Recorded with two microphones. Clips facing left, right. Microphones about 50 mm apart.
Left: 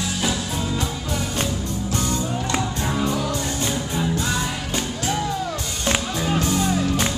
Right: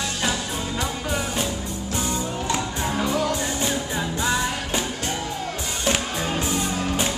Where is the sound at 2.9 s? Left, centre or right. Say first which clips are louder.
Right 1 dB; right.